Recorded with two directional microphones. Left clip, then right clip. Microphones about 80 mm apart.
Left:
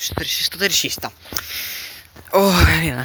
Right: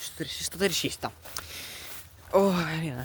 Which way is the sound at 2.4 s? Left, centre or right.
Left.